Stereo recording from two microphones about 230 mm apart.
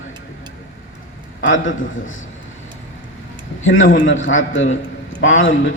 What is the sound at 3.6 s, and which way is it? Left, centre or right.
A man's voice, left.